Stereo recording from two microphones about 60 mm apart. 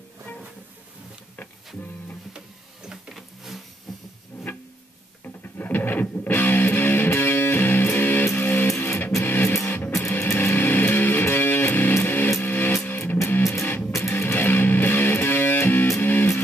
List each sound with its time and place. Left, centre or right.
3.2 s vehicle: centre
4.3 s music: left
12.3 s music: left
12.5 s music: left